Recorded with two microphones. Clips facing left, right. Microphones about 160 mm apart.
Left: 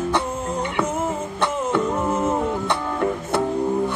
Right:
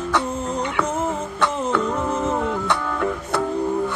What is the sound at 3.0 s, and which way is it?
Music, 25° left (ahead or behind).